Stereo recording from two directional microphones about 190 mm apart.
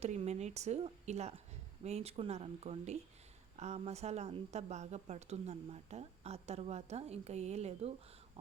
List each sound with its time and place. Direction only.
0.0 s speech: 35° right (ahead or behind)